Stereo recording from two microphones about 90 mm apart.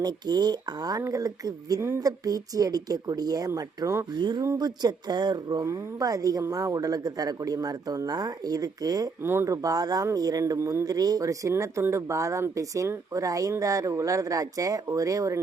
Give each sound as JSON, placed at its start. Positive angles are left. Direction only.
{"t": 0.0, "sound": "a man's voice", "side_deg": -50}
{"t": 4.1, "sound": "a man's voice", "side_deg": -55}
{"t": 5.6, "sound": "a man's voice", "side_deg": -40}
{"t": 9.2, "sound": "speech", "side_deg": -30}
{"t": 10.8, "sound": "speech", "side_deg": -45}